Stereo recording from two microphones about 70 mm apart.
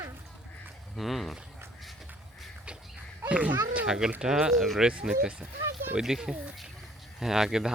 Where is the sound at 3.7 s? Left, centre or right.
Centre.